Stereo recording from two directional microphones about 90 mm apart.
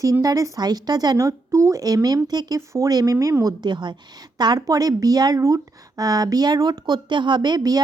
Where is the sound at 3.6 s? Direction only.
55° right (ahead or behind).